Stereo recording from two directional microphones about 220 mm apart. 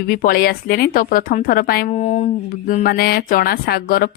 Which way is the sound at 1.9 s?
30° left (ahead or behind).